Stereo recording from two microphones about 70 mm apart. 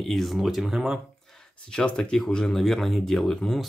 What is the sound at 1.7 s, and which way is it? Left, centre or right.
Speech, centre.